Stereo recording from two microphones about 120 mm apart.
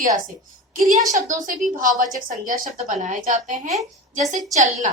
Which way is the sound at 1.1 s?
90° right.